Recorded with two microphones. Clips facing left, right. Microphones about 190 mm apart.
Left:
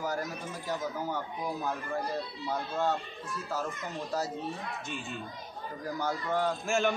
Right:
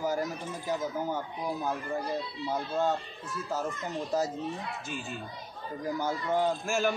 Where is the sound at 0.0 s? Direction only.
15° right (ahead or behind).